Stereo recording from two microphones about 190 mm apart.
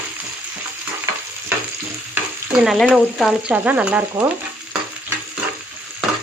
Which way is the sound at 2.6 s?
Centre (ahead or behind).